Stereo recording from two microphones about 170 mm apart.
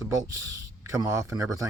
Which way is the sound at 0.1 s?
20° right (ahead or behind).